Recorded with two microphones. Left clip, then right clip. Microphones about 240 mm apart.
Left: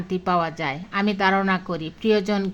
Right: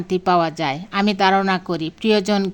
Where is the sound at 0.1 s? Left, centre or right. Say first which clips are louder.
Right 5 dB; right.